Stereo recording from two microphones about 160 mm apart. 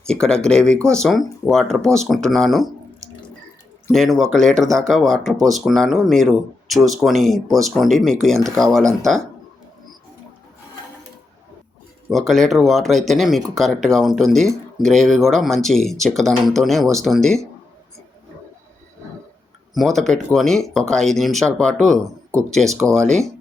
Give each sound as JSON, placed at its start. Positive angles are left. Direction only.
{"t": 0.1, "sound": "speech", "side_deg": 5}
{"t": 3.9, "sound": "speech", "side_deg": 0}
{"t": 12.1, "sound": "speech", "side_deg": 0}
{"t": 19.7, "sound": "speech", "side_deg": 0}